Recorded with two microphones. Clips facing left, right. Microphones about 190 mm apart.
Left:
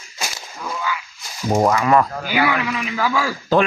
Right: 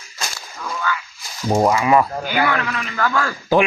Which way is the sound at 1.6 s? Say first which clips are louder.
Even; 5° right (ahead or behind).